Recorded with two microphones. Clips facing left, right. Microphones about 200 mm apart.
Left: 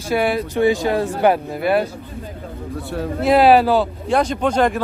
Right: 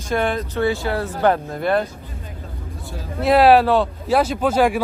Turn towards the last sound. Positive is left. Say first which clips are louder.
# even
turn(degrees=-5)  # may be behind; listen again after turning